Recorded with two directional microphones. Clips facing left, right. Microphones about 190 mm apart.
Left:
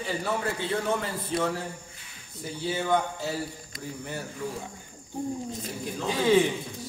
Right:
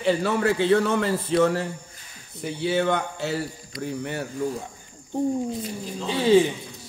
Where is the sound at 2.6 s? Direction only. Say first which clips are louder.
Right 3 dB; 75° right (ahead or behind).